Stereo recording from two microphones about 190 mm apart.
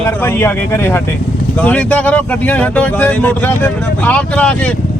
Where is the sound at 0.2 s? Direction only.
10° left (ahead or behind).